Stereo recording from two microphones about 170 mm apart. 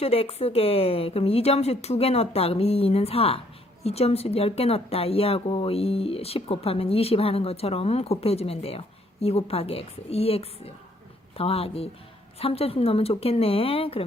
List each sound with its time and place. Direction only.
0.0 s speech: 35° left (ahead or behind)